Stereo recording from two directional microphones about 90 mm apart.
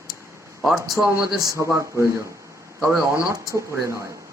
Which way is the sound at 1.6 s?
30° right (ahead or behind).